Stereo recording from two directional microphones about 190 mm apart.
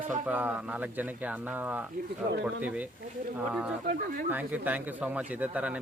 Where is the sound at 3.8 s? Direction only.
50° right (ahead or behind).